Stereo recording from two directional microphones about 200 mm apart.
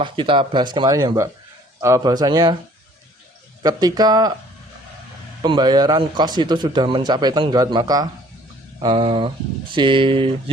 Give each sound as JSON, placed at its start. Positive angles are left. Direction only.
{"t": 0.0, "sound": "a man's voice", "side_deg": -25}
{"t": 3.6, "sound": "a man's voice", "side_deg": -20}
{"t": 5.4, "sound": "a man's voice", "side_deg": -20}